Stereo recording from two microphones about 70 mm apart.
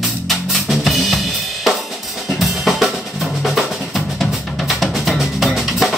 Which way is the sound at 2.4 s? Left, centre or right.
Centre.